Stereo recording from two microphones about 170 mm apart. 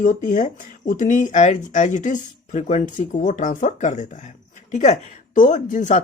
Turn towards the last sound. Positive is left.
turn(degrees=45)  # may be behind; listen again after turning